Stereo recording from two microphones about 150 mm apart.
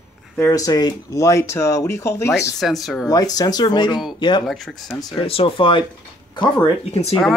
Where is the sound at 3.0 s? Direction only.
25° left (ahead or behind).